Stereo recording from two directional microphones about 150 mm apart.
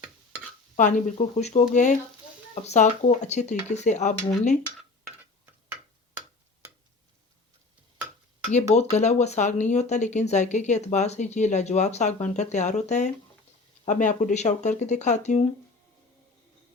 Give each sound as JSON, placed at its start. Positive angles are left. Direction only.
{"t": 0.8, "sound": "speech", "side_deg": 55}
{"t": 8.4, "sound": "speech", "side_deg": 50}